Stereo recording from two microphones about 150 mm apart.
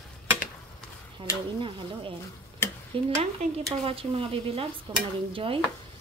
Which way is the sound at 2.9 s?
35° right (ahead or behind).